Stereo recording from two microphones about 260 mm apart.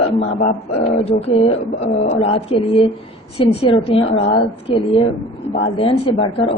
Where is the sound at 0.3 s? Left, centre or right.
Left.